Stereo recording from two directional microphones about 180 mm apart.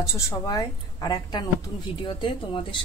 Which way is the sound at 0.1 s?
20° left (ahead or behind).